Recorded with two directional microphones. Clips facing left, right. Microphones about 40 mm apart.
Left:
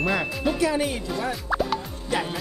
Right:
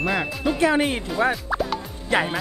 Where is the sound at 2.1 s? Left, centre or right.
Right.